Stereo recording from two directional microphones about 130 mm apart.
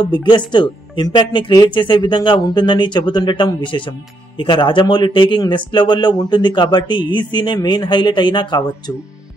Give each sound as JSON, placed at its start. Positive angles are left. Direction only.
{"t": 0.1, "sound": "speech", "side_deg": 35}